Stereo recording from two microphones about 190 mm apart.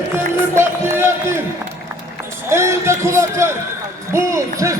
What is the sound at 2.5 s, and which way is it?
A man's voice, 15° right (ahead or behind).